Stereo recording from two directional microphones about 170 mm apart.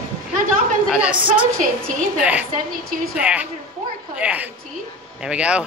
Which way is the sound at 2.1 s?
10° right (ahead or behind).